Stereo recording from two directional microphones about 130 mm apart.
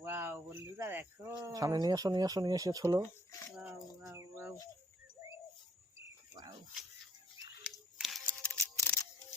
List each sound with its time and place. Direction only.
0.0 s cricket: 15° right (ahead or behind)
1.5 s speech: 25° right (ahead or behind)
3.0 s a sound: 20° left (ahead or behind)
3.6 s a sound: 10° right (ahead or behind)
4.1 s bird: 20° right (ahead or behind)
7.6 s camera: 5° right (ahead or behind)
8.3 s music: 10° left (ahead or behind)